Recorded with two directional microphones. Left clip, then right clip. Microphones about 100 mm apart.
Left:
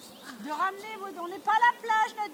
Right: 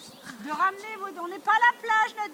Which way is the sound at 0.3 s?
25° right (ahead or behind).